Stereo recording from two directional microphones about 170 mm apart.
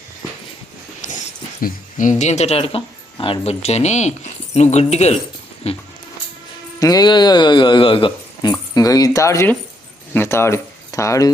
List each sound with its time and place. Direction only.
1.0 s dog: 50° left (ahead or behind)
1.6 s speech: 50° left (ahead or behind)
6.7 s a man's voice: 20° left (ahead or behind)